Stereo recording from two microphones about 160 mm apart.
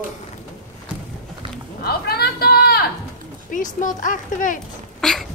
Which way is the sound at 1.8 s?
75° left (ahead or behind).